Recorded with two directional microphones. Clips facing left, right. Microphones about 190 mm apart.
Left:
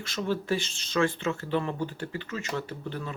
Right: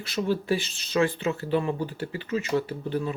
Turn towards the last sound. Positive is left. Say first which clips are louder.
# right 6 dB
turn(degrees=-15)  # may be behind; listen again after turning